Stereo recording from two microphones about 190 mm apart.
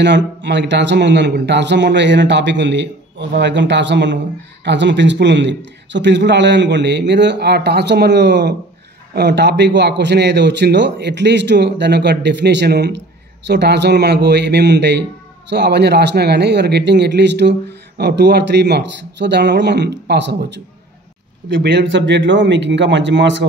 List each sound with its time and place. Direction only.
0.0 s speech: 70° right (ahead or behind)